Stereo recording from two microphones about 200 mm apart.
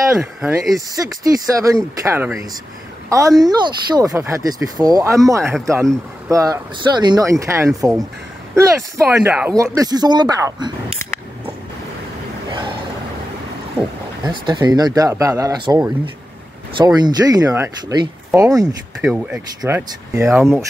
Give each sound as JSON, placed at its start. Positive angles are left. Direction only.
{"t": 0.2, "sound": "speech", "side_deg": -5}
{"t": 0.7, "sound": "speech", "side_deg": -15}
{"t": 9.8, "sound": "speech", "side_deg": -20}
{"t": 14.2, "sound": "speech", "side_deg": -20}
{"t": 18.9, "sound": "speech", "side_deg": -5}